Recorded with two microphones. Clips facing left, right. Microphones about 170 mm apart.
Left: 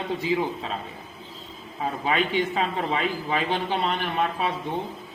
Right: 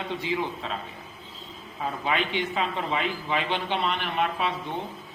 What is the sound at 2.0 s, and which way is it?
A man's voice, 40° left (ahead or behind).